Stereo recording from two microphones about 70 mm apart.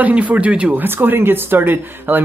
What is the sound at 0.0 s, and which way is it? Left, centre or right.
Speech, right.